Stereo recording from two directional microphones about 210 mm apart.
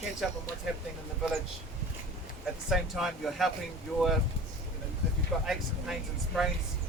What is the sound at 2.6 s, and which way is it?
Speech, centre (ahead or behind).